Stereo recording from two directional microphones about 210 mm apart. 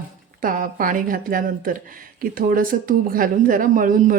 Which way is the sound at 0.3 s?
40° right (ahead or behind).